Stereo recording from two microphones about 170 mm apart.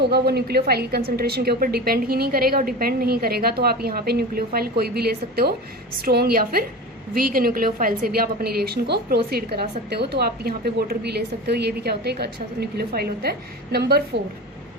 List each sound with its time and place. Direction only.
0.0 s a woman's voice: 70° right (ahead or behind)